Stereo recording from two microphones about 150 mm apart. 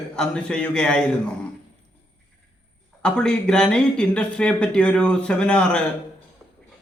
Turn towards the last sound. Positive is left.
turn(degrees=5)  # may be behind; listen again after turning